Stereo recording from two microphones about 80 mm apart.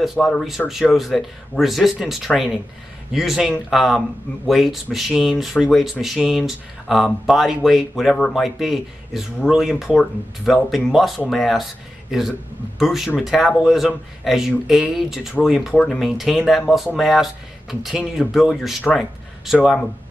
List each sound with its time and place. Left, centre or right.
0.2 s speech: centre
12.7 s speech: centre
15.7 s speech: centre
16.0 s speech: centre